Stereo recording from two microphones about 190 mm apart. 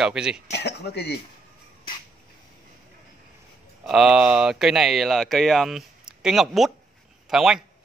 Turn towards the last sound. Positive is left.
turn(degrees=0)  # may be behind; listen again after turning